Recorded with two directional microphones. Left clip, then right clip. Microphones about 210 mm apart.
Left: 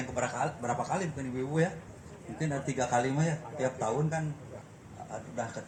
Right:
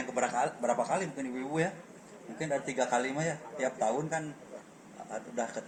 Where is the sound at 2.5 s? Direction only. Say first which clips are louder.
Right 1 dB; 20° right (ahead or behind).